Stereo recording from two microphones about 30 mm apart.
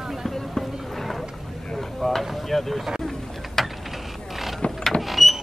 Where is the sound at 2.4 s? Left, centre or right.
Centre.